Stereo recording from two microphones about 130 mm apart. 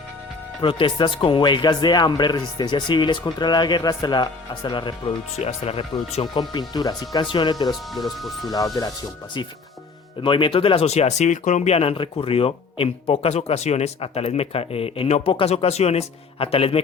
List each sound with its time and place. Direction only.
0.6 s speech: 40° left (ahead or behind)
5.4 s speech: 55° left (ahead or behind)
6.5 s speech: 30° left (ahead or behind)
7.7 s speech: centre (ahead or behind)
8.4 s speech: 25° left (ahead or behind)
10.2 s speech: 40° left (ahead or behind)